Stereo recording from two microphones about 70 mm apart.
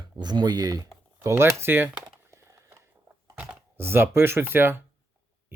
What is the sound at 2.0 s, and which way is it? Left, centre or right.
Crumpling, right.